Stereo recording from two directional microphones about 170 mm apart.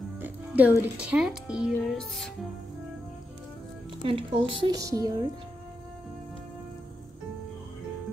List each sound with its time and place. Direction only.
0.2 s music: 10° right (ahead or behind)
0.9 s speech: 5° right (ahead or behind)
4.0 s speech: 30° right (ahead or behind)
4.6 s speech: 20° right (ahead or behind)